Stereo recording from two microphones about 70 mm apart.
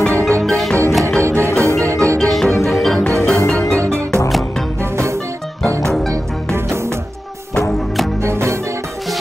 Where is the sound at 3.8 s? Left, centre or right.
Right.